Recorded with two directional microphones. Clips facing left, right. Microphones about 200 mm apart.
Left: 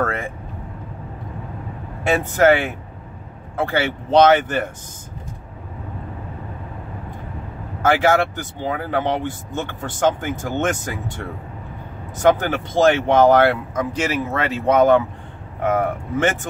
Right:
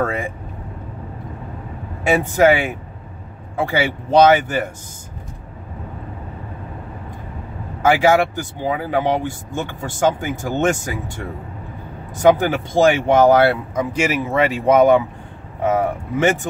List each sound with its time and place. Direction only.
0.0 s speech: 10° right (ahead or behind)
2.0 s speech: 10° right (ahead or behind)
7.8 s speech: 10° right (ahead or behind)
12.2 s speech: 10° right (ahead or behind)